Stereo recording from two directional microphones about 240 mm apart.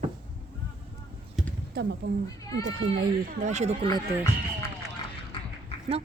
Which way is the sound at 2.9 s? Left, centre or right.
Right.